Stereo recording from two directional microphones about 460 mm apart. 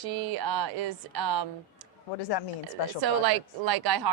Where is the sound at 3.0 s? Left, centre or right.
Right.